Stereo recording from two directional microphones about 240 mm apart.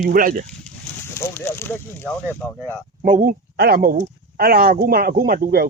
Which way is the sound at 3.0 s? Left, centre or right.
Right.